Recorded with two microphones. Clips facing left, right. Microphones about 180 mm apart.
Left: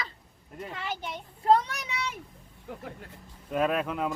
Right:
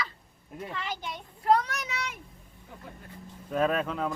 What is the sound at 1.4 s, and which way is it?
Speech, 25° left (ahead or behind).